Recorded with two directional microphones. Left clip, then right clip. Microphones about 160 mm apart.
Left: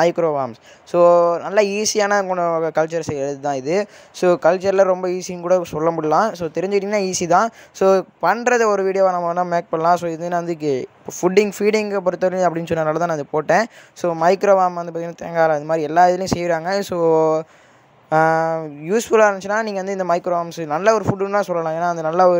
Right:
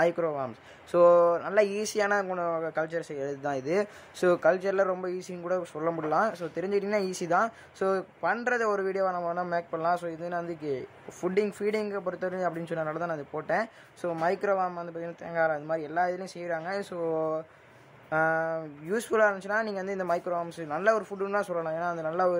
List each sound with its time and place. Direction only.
0.0 s speech: 30° left (ahead or behind)
18.6 s speech: 30° left (ahead or behind)